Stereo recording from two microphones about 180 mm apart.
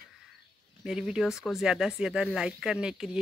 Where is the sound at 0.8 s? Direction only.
5° right (ahead or behind).